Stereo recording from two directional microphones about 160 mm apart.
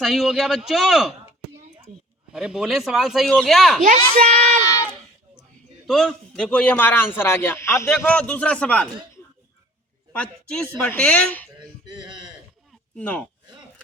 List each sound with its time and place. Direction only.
0.0 s speech: centre (ahead or behind)
2.3 s speech: 5° right (ahead or behind)
3.8 s speech: 60° right (ahead or behind)
5.9 s a man's voice: 5° left (ahead or behind)
10.1 s a man's voice: 5° left (ahead or behind)
13.0 s a man's voice: 10° left (ahead or behind)